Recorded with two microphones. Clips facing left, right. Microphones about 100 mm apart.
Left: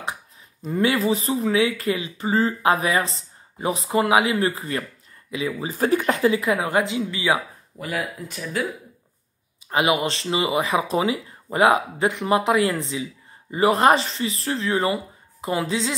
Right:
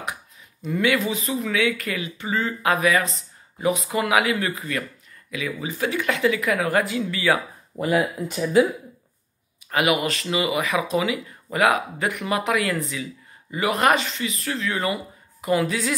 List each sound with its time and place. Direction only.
0.6 s speech: 35° left (ahead or behind)
7.8 s speech: 25° right (ahead or behind)
9.7 s a woman's voice: 30° left (ahead or behind)